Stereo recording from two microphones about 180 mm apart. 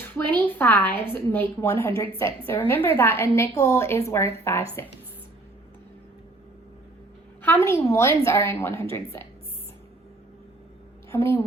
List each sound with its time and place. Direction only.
0.3 s a woman's voice: 10° left (ahead or behind)
7.4 s a woman's voice: 10° left (ahead or behind)
11.1 s a woman's voice: 15° left (ahead or behind)